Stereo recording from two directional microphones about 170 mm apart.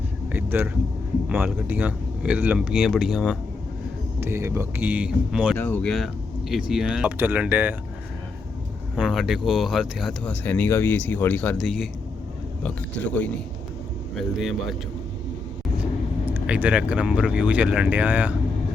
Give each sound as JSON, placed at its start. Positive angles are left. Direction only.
{"t": 0.3, "sound": "vehicle", "side_deg": -10}
{"t": 1.3, "sound": "speech", "side_deg": -10}
{"t": 4.2, "sound": "speech", "side_deg": -15}
{"t": 5.5, "sound": "speech", "side_deg": 10}
{"t": 9.0, "sound": "speech", "side_deg": 0}
{"t": 16.2, "sound": "speech", "side_deg": -10}